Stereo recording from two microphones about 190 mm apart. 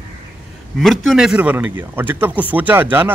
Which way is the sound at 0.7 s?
Centre (ahead or behind).